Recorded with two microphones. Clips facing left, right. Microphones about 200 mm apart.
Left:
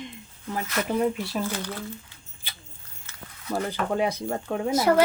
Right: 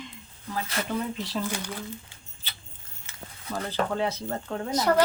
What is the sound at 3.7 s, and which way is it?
A child's voice, 15° left (ahead or behind).